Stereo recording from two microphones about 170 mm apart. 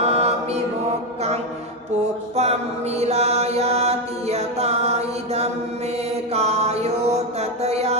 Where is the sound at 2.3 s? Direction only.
40° right (ahead or behind).